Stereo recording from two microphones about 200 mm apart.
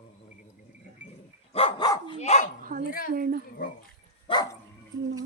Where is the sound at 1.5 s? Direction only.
25° left (ahead or behind).